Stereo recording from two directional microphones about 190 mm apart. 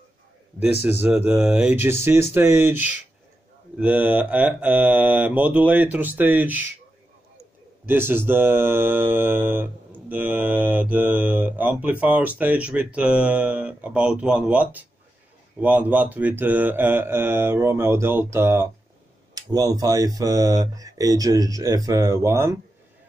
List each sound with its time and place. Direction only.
1.0 s mantra: 5° right (ahead or behind)
7.8 s mantra: 10° right (ahead or behind)
19.3 s speech: 20° right (ahead or behind)